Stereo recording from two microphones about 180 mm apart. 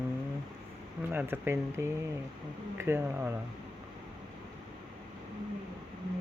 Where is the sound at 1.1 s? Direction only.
10° right (ahead or behind).